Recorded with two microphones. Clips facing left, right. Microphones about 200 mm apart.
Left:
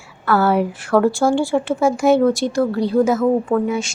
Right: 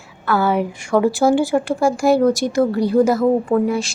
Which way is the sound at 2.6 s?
15° right (ahead or behind).